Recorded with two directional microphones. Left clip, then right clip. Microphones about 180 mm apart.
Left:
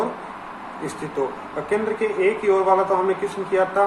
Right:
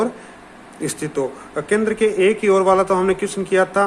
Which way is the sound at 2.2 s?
70° right (ahead or behind).